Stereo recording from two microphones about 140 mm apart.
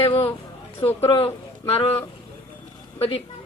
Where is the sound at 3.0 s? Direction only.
45° left (ahead or behind).